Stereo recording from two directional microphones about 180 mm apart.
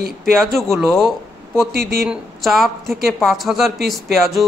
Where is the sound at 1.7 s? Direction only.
60° right (ahead or behind).